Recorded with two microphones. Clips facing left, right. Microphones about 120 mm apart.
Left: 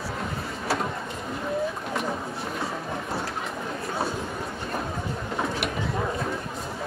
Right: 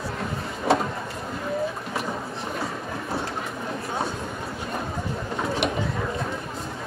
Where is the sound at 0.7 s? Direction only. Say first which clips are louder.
Right 6 dB; 25° right (ahead or behind).